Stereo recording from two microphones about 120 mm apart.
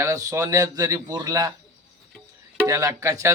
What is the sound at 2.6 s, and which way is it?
Speech, 30° right (ahead or behind).